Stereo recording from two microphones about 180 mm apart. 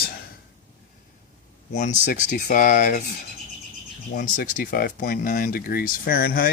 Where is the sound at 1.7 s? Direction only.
45° left (ahead or behind).